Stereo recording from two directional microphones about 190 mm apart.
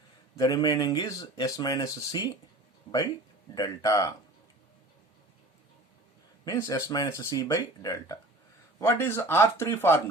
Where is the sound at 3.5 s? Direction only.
20° left (ahead or behind).